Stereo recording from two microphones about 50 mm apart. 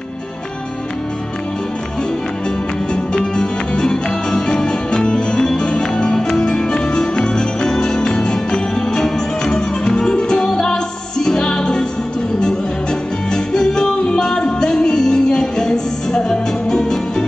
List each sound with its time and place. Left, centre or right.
2.9 s music: centre
13.3 s music: centre